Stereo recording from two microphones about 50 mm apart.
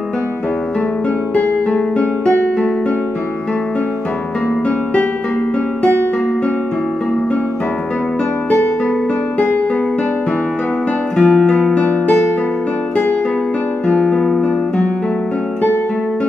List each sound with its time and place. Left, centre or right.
2.0 s music: left
11.3 s music: centre
13.8 s music: centre